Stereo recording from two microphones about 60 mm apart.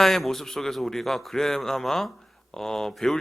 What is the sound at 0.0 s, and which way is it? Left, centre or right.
A man's voice, centre.